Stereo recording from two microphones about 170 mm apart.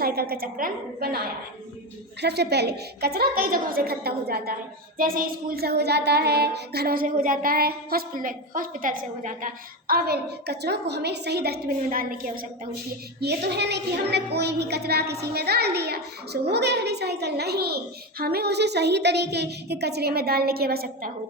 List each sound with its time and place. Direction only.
0.0 s music: 60° right (ahead or behind)
2.2 s a woman's voice: 75° right (ahead or behind)
4.9 s music: 55° right (ahead or behind)
13.2 s a woman's voice: 80° right; by 21.1 s 60° right (ahead or behind)